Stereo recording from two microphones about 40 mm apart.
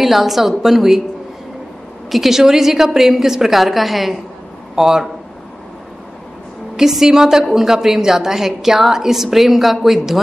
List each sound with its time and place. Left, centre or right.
0.0 s a woman's voice: centre
2.0 s a woman's voice: centre
6.8 s a woman's voice: centre